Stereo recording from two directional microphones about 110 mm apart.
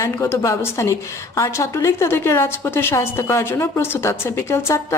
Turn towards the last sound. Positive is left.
turn(degrees=25)  # may be behind; listen again after turning